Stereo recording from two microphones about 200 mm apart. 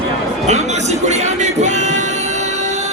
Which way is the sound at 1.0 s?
35° right (ahead or behind).